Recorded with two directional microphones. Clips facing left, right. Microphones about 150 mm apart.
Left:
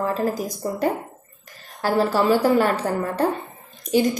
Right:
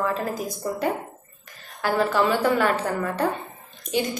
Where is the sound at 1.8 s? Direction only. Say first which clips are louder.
Left 2 dB; 35° left (ahead or behind).